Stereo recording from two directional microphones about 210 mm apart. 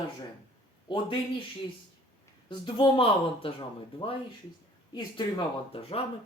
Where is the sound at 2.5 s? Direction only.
25° left (ahead or behind).